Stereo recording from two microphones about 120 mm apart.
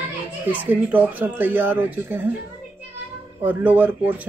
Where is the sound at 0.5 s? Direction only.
15° right (ahead or behind).